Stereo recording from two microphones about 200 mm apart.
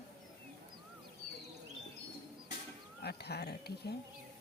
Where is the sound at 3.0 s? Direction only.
55° left (ahead or behind).